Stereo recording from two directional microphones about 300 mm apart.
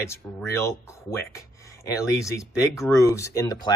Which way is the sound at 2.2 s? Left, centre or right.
Centre.